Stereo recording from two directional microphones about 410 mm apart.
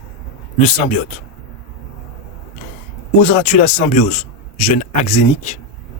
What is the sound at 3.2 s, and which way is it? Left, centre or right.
Speech, centre.